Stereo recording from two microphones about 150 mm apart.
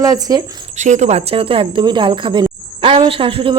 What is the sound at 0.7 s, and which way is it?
Speech, 50° right (ahead or behind).